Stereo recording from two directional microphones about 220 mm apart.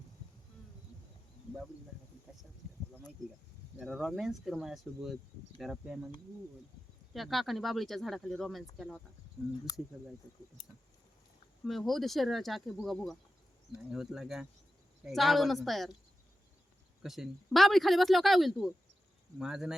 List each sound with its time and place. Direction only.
3.8 s speech: centre (ahead or behind)
7.1 s speech: centre (ahead or behind)
9.7 s speech: 15° left (ahead or behind)
11.6 s speech: centre (ahead or behind)
17.0 s speech: centre (ahead or behind)